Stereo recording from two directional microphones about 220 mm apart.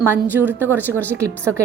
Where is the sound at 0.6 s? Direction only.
10° left (ahead or behind).